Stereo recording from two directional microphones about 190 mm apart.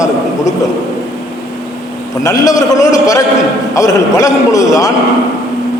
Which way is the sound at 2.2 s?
15° left (ahead or behind).